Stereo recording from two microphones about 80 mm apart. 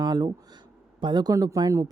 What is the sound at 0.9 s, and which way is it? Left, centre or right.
Speech, right.